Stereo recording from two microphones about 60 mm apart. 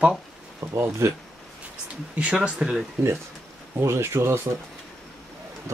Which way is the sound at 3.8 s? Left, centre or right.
Right.